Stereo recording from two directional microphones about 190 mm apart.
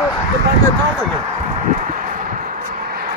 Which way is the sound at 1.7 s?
45° right (ahead or behind).